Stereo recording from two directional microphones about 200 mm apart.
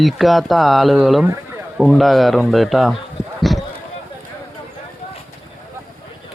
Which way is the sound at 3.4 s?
Centre (ahead or behind).